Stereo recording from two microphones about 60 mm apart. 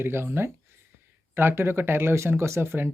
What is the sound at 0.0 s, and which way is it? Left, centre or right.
Speech, right.